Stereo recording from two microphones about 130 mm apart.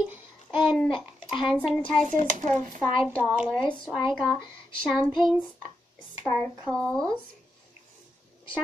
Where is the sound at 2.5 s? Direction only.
70° right (ahead or behind).